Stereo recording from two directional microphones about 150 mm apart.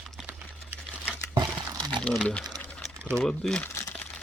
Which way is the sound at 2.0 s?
Centre (ahead or behind).